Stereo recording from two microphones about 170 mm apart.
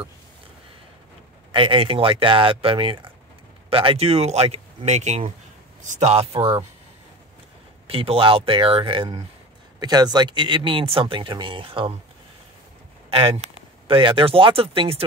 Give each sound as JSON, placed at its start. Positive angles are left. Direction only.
{"t": 1.5, "sound": "speech", "side_deg": -30}
{"t": 7.8, "sound": "speech", "side_deg": -35}
{"t": 13.1, "sound": "speech", "side_deg": -35}